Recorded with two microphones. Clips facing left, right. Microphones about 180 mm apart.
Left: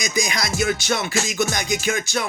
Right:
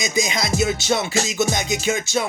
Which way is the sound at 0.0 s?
25° right (ahead or behind).